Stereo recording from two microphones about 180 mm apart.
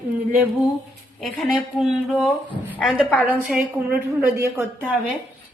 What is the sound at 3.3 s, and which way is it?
A woman's voice, 10° right (ahead or behind).